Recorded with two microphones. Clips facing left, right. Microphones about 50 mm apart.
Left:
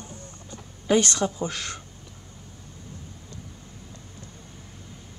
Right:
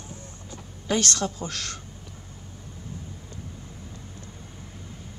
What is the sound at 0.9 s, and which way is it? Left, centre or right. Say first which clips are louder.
Speech: left 4 dB; centre.